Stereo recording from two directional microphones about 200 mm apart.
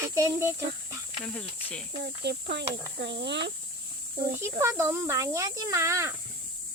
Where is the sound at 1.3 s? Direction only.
5° left (ahead or behind).